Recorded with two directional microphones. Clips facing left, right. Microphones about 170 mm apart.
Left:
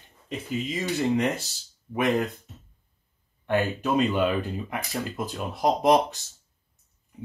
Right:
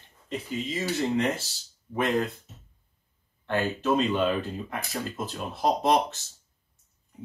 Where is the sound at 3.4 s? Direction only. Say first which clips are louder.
Left 1 dB; 15° left (ahead or behind).